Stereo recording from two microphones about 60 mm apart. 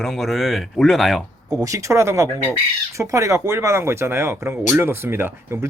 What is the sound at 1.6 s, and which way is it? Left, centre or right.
Speech, right.